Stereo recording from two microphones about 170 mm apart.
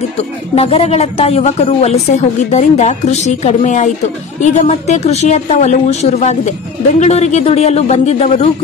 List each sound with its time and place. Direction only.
0.6 s a woman's voice: 35° left (ahead or behind)